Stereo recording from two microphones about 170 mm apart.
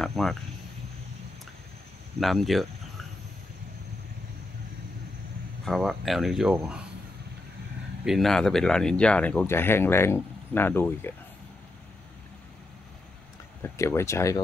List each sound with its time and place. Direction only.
0.0 s speech: centre (ahead or behind)
2.1 s speech: centre (ahead or behind)
5.7 s speech: centre (ahead or behind)
8.0 s speech: centre (ahead or behind)
13.6 s speech: 15° left (ahead or behind)